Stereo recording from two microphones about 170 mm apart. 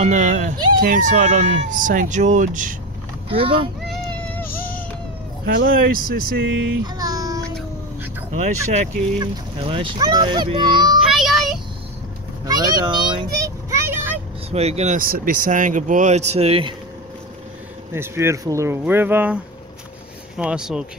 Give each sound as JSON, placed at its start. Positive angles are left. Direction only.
{"t": 0.0, "sound": "speech", "side_deg": -45}
{"t": 3.3, "sound": "speech", "side_deg": -30}
{"t": 3.8, "sound": "meow", "side_deg": 5}
{"t": 5.5, "sound": "speech", "side_deg": -65}
{"t": 7.0, "sound": "child singing", "side_deg": -20}
{"t": 8.3, "sound": "speech", "side_deg": -45}
{"t": 9.2, "sound": "a child's voice", "side_deg": -30}
{"t": 11.0, "sound": "child singing", "side_deg": 0}
{"t": 12.4, "sound": "vehicle", "side_deg": -25}
{"t": 14.5, "sound": "speech", "side_deg": -40}
{"t": 15.0, "sound": "speech", "side_deg": -60}
{"t": 17.9, "sound": "speech", "side_deg": -15}